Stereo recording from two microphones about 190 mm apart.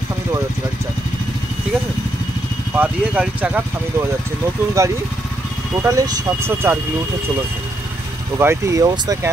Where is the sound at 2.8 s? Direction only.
10° right (ahead or behind).